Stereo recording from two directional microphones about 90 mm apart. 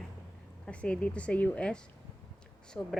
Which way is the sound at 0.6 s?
15° left (ahead or behind).